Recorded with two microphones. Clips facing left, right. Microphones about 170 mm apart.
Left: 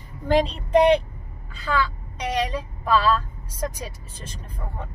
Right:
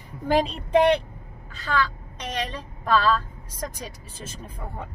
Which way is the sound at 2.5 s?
5° left (ahead or behind).